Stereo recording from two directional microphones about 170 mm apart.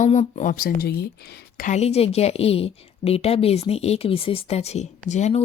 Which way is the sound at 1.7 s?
40° left (ahead or behind).